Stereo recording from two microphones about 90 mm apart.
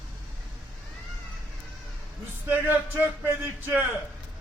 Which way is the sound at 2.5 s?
20° right (ahead or behind).